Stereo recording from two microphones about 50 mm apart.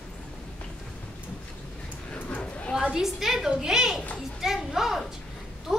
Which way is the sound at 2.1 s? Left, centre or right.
Left.